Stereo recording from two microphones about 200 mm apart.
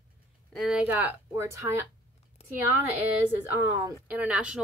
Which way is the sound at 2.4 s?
30° left (ahead or behind).